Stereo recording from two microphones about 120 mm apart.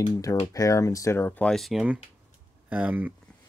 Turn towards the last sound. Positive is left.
turn(degrees=-15)  # may be behind; listen again after turning